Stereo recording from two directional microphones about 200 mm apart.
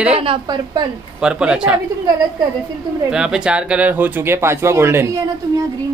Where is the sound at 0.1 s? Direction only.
25° right (ahead or behind).